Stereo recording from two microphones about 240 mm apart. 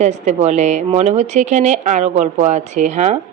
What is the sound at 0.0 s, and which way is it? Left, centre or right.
A woman's voice, right.